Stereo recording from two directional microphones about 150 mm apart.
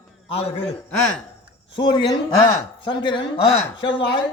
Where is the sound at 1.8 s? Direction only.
30° left (ahead or behind).